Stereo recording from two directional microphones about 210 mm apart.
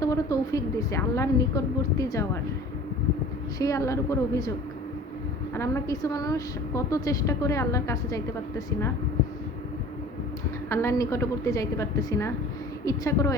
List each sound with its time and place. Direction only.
0.0 s a woman's voice: 15° left (ahead or behind)
3.6 s a woman's voice: 15° left (ahead or behind)
5.5 s a woman's voice: 15° left (ahead or behind)
10.7 s a woman's voice: 15° left (ahead or behind)